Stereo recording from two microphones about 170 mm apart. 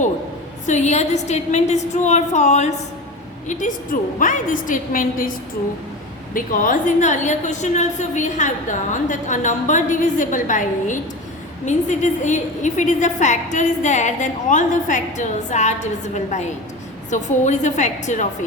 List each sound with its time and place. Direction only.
0.7 s a woman's voice: 45° left (ahead or behind)
6.3 s a woman's voice: 50° left (ahead or behind)